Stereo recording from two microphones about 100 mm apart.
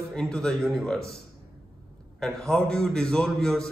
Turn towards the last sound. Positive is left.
turn(degrees=5)  # may be behind; listen again after turning